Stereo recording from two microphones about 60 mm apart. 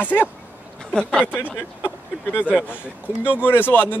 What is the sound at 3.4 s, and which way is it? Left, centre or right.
Speech, left.